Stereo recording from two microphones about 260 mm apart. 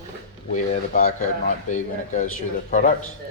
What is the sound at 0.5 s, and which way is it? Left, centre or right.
Speech, left.